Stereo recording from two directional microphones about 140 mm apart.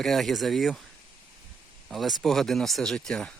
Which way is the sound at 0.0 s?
Centre (ahead or behind).